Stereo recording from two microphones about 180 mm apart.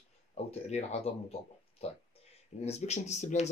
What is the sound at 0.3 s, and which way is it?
Speech, 35° left (ahead or behind).